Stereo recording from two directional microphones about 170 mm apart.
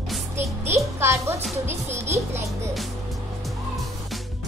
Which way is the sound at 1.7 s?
15° right (ahead or behind).